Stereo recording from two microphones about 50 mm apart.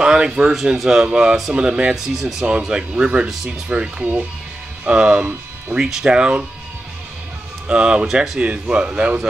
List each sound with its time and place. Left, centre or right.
0.0 s speech: centre
2.0 s speech: centre
3.0 s speech: right
4.0 s speech: right
4.8 s speech: right
5.8 s speech: centre
6.0 s speech: centre
7.6 s speech: centre
8.4 s speech: right